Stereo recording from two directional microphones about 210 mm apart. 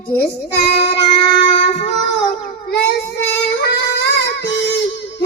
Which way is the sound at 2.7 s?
55° left (ahead or behind).